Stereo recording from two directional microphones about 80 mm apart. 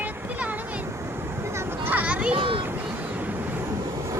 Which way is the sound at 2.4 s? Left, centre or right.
Right.